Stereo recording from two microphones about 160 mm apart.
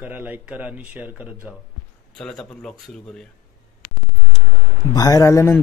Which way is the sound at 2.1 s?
5° left (ahead or behind).